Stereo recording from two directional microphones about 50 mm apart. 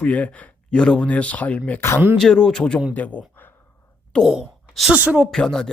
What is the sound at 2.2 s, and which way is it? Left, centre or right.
Speech, centre.